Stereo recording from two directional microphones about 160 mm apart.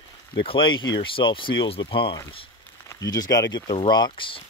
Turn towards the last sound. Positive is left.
turn(degrees=35)  # may be behind; listen again after turning